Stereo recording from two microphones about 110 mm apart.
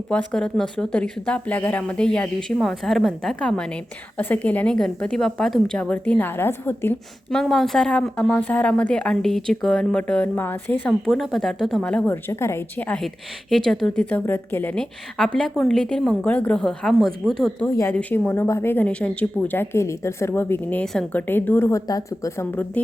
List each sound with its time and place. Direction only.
0.1 s a woman's voice: 10° left (ahead or behind)
7.3 s speech: centre (ahead or behind)
11.0 s a woman's voice: centre (ahead or behind)
12.1 s speech: 25° left (ahead or behind)
13.7 s a woman's voice: 5° left (ahead or behind)
17.6 s speech: 15° left (ahead or behind)
20.8 s a woman's voice: 5° left (ahead or behind)
21.2 s speech: 15° left (ahead or behind); by 22.4 s 30° left (ahead or behind)